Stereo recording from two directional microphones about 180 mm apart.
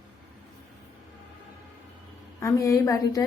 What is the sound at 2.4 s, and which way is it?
Speech, 20° left (ahead or behind).